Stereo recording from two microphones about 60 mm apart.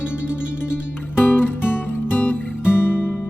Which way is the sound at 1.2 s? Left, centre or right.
Left.